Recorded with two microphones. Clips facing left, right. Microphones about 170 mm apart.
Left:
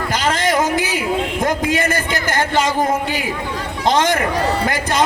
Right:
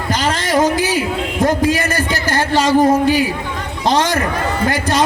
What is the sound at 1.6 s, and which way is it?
A man's voice, 20° left (ahead or behind).